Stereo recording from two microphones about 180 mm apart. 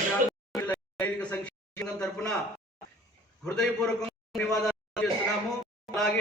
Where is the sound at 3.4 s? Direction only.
5° left (ahead or behind).